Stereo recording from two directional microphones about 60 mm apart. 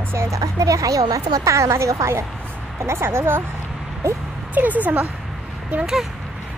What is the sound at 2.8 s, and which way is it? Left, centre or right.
Speech, right.